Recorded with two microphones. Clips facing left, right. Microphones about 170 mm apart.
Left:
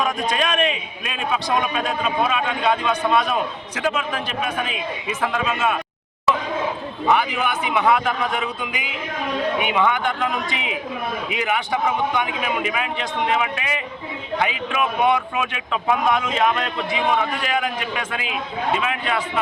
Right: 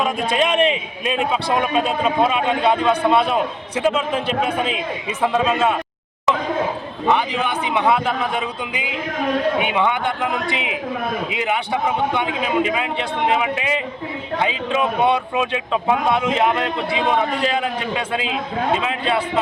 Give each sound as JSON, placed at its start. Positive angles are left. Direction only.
{"t": 0.0, "sound": "a man's voice", "side_deg": -25}
{"t": 7.1, "sound": "a man's voice", "side_deg": -25}